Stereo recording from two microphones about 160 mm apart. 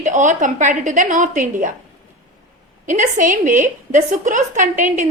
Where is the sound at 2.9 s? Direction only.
55° right (ahead or behind).